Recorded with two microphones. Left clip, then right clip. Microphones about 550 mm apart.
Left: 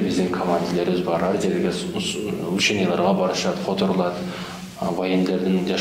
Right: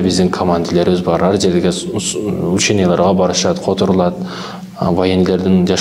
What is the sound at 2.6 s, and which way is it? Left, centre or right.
A man's voice, right.